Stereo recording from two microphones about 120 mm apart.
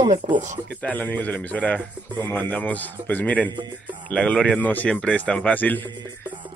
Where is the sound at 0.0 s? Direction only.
75° right (ahead or behind).